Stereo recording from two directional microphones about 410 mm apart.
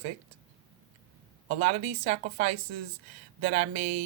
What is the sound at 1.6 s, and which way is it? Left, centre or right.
Speech, centre.